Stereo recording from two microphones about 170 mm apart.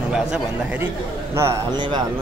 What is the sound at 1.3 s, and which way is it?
Speech, 15° right (ahead or behind).